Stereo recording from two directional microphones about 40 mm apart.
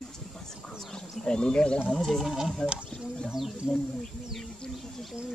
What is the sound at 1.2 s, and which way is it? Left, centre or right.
Speech, left.